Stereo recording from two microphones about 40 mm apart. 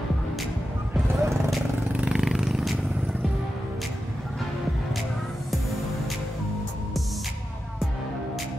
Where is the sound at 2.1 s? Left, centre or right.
Centre.